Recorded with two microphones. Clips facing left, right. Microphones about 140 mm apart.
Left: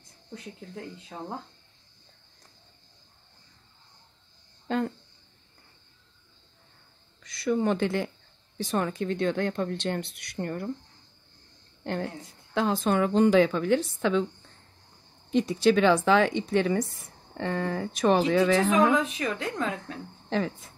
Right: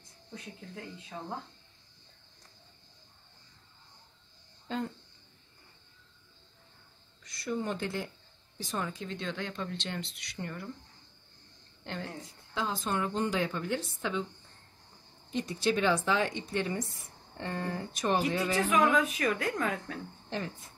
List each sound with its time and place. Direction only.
4.6 s speech: 65° left (ahead or behind)
7.2 s speech: 85° left; by 10.7 s 45° left (ahead or behind)
11.8 s a woman's voice: 50° left (ahead or behind)
12.5 s a woman's voice: 70° left (ahead or behind); by 14.2 s 90° left
15.3 s a woman's voice: 90° left
18.9 s speech: 25° left (ahead or behind)
20.2 s speech: 90° left